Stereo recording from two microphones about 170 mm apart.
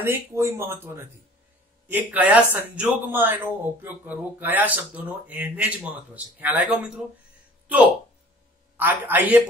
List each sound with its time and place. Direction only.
0.0 s speech: 15° right (ahead or behind)